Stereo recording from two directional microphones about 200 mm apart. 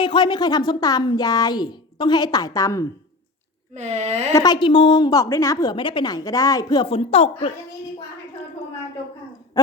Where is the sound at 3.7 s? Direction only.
35° right (ahead or behind).